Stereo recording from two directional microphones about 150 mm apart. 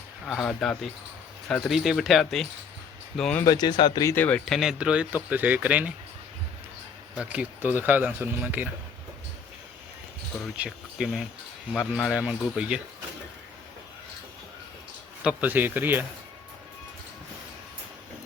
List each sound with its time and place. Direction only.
0.3 s speech: 5° left (ahead or behind)
3.4 s speech: 25° left (ahead or behind)
4.1 s speech: 10° left (ahead or behind); by 5.9 s 10° right (ahead or behind)
7.2 s speech: 10° right (ahead or behind)
10.6 s speech: 5° right (ahead or behind)
15.2 s speech: 10° right (ahead or behind)